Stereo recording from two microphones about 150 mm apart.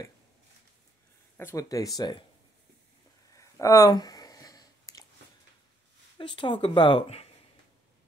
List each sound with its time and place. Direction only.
1.4 s speech: 20° left (ahead or behind)
3.3 s a sound: 20° left (ahead or behind)
6.1 s speech: 35° left (ahead or behind)